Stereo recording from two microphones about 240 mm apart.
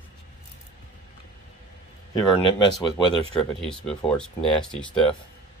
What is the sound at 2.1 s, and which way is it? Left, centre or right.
Speech, centre.